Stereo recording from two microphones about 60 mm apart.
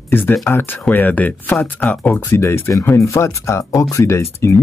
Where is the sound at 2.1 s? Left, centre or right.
Left.